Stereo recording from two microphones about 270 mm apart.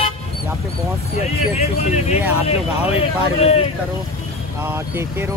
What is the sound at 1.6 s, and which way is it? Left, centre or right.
Speech, left.